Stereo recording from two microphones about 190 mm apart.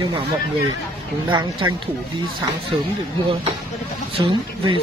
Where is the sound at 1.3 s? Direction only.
25° right (ahead or behind).